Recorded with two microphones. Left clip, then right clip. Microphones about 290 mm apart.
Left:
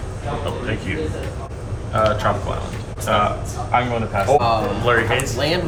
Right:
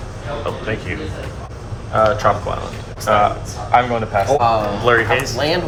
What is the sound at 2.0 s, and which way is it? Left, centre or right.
Speech, right.